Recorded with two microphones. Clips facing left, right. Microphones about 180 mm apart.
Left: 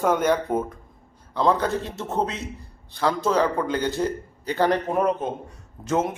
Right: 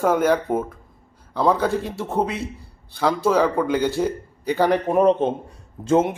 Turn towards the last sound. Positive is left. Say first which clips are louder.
# right 5 dB
turn(degrees=-30)  # may be behind; listen again after turning